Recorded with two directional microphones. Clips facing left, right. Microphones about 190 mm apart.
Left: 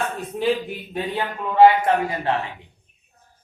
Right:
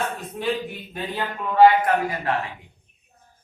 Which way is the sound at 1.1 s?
25° left (ahead or behind).